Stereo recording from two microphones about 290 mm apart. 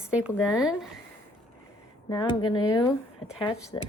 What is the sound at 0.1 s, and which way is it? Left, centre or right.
Speech, centre.